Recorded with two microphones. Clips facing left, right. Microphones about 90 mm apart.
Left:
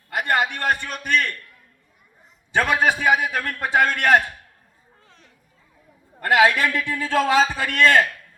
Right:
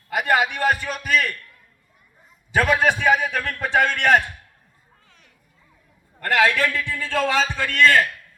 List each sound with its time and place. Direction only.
0.1 s a man's voice: centre (ahead or behind)
2.5 s a man's voice: centre (ahead or behind)
5.0 s a sound: 35° left (ahead or behind)
6.1 s a man's voice: 15° left (ahead or behind)